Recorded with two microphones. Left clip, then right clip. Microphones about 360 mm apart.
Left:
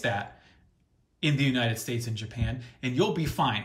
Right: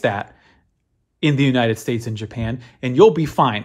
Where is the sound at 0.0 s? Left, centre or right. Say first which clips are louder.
Right 9 dB; centre.